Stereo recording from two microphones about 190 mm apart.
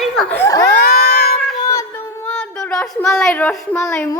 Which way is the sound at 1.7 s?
15° left (ahead or behind).